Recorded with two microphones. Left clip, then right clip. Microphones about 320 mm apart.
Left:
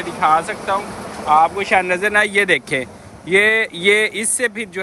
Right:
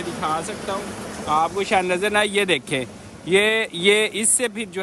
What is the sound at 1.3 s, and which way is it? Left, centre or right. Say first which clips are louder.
Speech: left 6 dB; centre.